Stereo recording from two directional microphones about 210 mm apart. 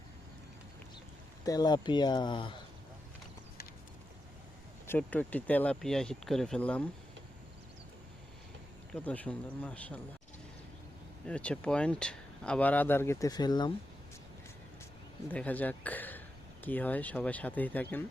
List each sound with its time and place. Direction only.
1.5 s speech: 20° left (ahead or behind)
4.9 s speech: 5° left (ahead or behind)
8.9 s speech: 5° left (ahead or behind)
11.3 s speech: 5° left (ahead or behind)
15.3 s speech: 5° left (ahead or behind)